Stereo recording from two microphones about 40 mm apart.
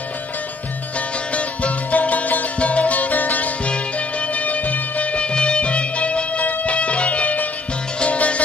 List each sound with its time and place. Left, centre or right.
1.3 s music: left